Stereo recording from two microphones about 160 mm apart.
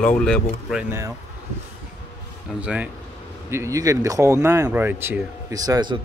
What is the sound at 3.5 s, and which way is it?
Speech, 20° right (ahead or behind).